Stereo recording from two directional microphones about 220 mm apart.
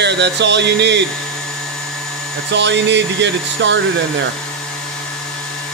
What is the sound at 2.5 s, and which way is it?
Speech, 55° right (ahead or behind).